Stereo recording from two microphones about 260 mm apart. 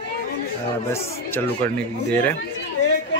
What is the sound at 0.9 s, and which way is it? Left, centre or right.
Speech, centre.